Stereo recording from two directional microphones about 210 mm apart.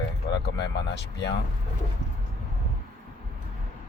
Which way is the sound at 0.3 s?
55° left (ahead or behind).